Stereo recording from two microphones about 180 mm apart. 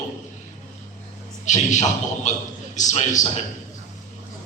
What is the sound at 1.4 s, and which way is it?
A man's voice, 40° left (ahead or behind).